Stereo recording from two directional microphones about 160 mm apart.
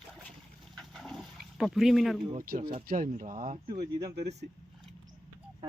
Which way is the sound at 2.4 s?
60° right (ahead or behind).